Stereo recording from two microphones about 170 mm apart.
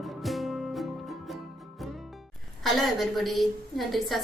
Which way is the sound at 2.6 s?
Centre (ahead or behind).